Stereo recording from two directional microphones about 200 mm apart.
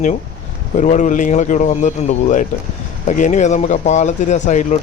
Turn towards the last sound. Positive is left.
turn(degrees=35)  # may be behind; listen again after turning